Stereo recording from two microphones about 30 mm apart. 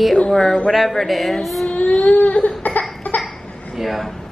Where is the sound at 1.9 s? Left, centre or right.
Left.